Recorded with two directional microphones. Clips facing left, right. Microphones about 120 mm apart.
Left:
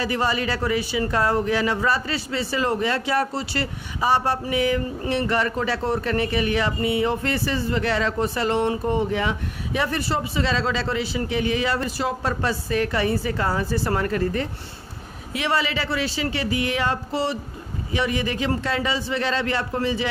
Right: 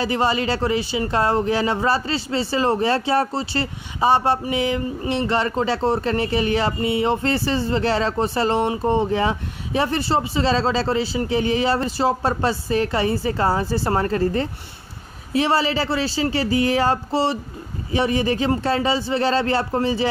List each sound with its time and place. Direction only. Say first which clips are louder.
0.0 s a man's voice: right 3 dB; 30° right (ahead or behind)